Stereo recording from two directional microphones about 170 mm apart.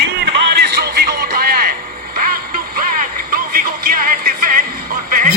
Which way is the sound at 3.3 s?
60° right (ahead or behind).